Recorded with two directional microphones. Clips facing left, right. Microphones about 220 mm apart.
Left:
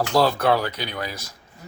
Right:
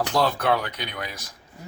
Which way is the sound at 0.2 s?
35° left (ahead or behind).